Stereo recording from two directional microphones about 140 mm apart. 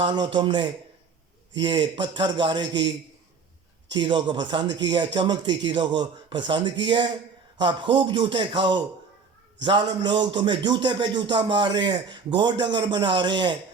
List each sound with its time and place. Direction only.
0.0 s speech: 35° right (ahead or behind)
3.9 s speech: 35° right (ahead or behind)